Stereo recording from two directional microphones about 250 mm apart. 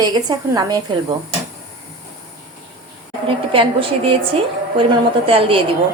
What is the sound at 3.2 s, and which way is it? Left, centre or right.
A woman's voice, right.